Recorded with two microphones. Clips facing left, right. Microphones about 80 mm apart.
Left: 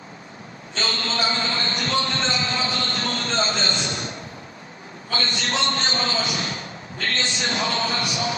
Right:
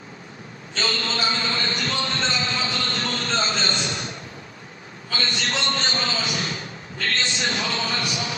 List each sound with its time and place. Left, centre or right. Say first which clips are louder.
0.7 s a man's voice: even; left
2.1 s a sound: left 1 dB; left
5.0 s a man's voice: left 1 dB; left